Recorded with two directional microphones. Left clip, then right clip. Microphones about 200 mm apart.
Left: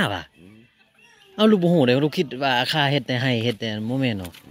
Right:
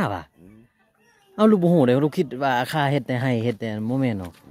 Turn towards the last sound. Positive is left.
turn(degrees=-10)  # may be behind; listen again after turning